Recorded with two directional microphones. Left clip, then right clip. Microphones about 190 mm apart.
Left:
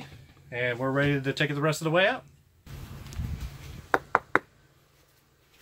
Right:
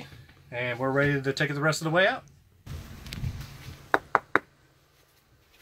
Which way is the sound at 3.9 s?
50° left (ahead or behind).